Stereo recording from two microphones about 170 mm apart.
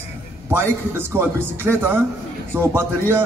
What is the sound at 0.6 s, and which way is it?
A man's voice, 15° right (ahead or behind).